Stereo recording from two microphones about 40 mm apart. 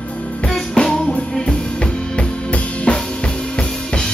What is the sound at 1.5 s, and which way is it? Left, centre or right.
Drum kit, left.